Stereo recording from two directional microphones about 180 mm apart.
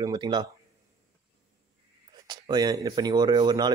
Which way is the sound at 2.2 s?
25° right (ahead or behind).